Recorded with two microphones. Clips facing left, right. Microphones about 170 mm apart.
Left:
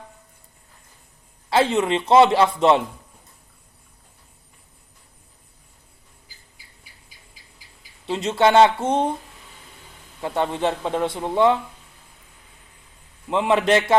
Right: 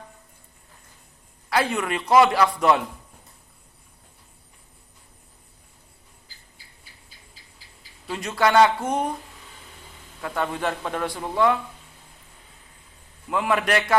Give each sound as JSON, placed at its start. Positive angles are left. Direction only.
{"t": 1.5, "sound": "speech", "side_deg": 25}
{"t": 7.4, "sound": "a sound", "side_deg": 10}
{"t": 8.0, "sound": "speech", "side_deg": 25}
{"t": 10.2, "sound": "speech", "side_deg": 25}
{"t": 13.3, "sound": "speech", "side_deg": 25}